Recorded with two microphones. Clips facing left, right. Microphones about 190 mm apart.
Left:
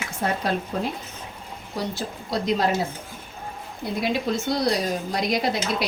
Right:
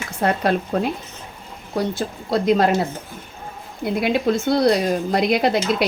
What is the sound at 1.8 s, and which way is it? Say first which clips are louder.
Speech: right 6 dB; 55° right (ahead or behind).